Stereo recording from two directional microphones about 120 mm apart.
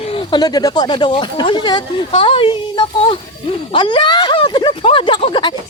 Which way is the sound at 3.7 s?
45° left (ahead or behind).